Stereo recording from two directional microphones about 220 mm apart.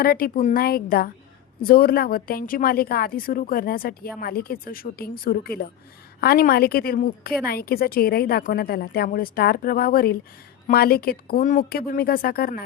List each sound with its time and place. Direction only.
0.0 s a woman's voice: 45° left (ahead or behind)